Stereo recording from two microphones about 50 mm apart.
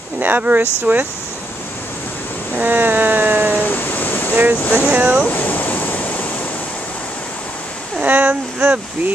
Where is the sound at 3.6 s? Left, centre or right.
Left.